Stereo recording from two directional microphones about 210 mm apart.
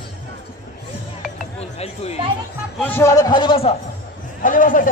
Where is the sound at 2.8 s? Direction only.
10° left (ahead or behind).